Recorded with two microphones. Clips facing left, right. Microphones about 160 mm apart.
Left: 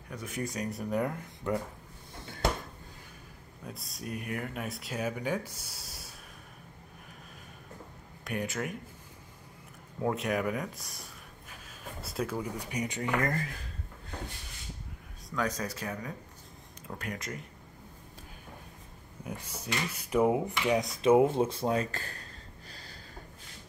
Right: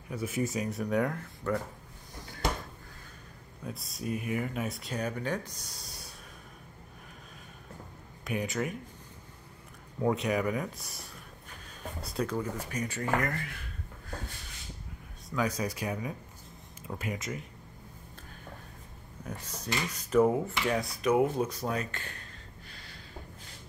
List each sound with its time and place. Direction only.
0.1 s speech: 5° right (ahead or behind)
1.4 s speech: 15° left (ahead or behind)
3.6 s speech: centre (ahead or behind)
5.6 s a sound: 5° left (ahead or behind)
8.2 s speech: centre (ahead or behind)
10.0 s speech: centre (ahead or behind); by 13.1 s 15° left (ahead or behind)
13.2 s speech: 35° left (ahead or behind)
15.2 s speech: 10° right (ahead or behind)
19.2 s speech: 10° left (ahead or behind); by 22.2 s 35° left (ahead or behind)
22.7 s snort: 35° left (ahead or behind)